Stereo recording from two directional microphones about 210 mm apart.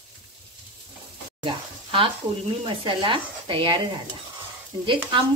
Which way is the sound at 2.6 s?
25° right (ahead or behind).